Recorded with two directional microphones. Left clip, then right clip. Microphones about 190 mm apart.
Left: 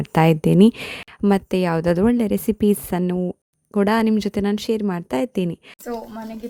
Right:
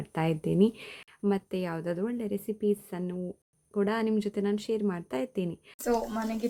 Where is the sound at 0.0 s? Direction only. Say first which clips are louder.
Left 13 dB; 50° left (ahead or behind).